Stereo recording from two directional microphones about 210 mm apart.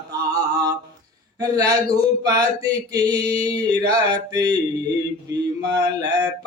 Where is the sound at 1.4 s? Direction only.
20° right (ahead or behind).